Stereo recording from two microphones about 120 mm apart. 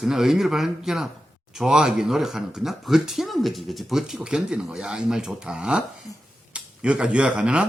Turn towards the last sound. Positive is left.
turn(degrees=-10)  # may be behind; listen again after turning